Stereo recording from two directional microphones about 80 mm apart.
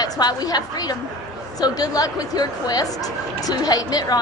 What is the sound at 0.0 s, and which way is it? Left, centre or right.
A woman's voice, left.